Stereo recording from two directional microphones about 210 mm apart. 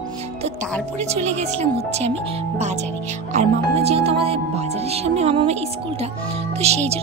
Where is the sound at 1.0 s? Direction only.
30° right (ahead or behind).